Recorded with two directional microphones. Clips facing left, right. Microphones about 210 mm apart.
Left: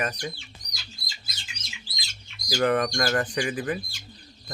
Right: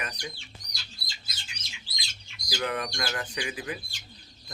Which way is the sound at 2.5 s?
50° left (ahead or behind).